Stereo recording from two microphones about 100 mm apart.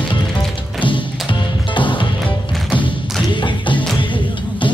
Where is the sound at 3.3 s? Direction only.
55° left (ahead or behind).